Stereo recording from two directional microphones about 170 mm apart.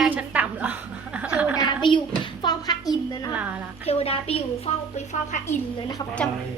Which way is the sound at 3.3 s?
10° right (ahead or behind).